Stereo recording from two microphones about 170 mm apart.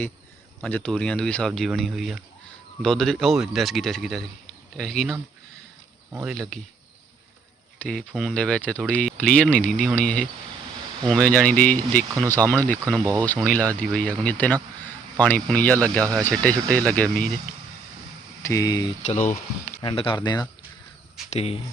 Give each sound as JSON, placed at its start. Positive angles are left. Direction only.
{"t": 0.6, "sound": "speech", "side_deg": 5}
{"t": 6.2, "sound": "speech", "side_deg": 5}
{"t": 7.8, "sound": "speech", "side_deg": 5}
{"t": 18.4, "sound": "speech", "side_deg": 20}
{"t": 19.0, "sound": "speech", "side_deg": 40}
{"t": 19.8, "sound": "speech", "side_deg": 30}
{"t": 21.2, "sound": "speech", "side_deg": 35}